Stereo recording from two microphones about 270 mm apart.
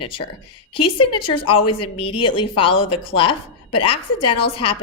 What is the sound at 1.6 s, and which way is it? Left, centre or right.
Speech, left.